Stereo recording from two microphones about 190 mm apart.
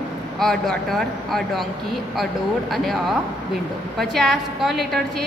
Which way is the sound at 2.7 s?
Centre (ahead or behind).